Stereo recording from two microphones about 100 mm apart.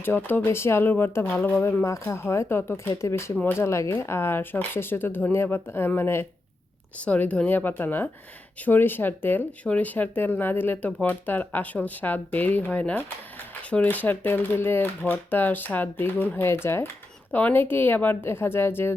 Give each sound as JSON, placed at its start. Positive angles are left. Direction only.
{"t": 0.0, "sound": "speech", "side_deg": 20}
{"t": 1.8, "sound": "speech", "side_deg": 30}